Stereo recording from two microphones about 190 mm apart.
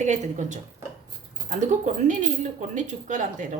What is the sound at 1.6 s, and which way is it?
Speech, 40° right (ahead or behind).